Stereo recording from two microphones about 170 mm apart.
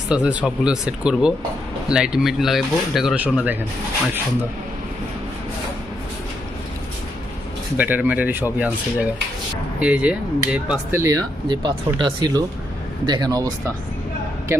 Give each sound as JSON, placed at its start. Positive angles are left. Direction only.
{"t": 0.1, "sound": "speech", "side_deg": -5}
{"t": 7.8, "sound": "speech", "side_deg": -10}
{"t": 9.8, "sound": "speech", "side_deg": -10}
{"t": 11.0, "sound": "speech", "side_deg": -20}